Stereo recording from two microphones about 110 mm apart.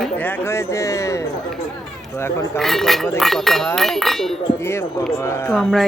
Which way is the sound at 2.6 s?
5° left (ahead or behind).